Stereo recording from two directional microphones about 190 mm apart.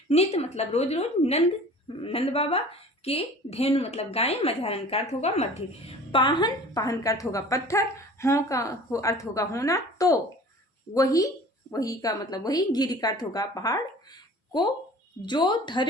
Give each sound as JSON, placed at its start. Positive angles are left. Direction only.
{"t": 0.1, "sound": "a woman's voice", "side_deg": 30}
{"t": 15.3, "sound": "a woman's voice", "side_deg": 25}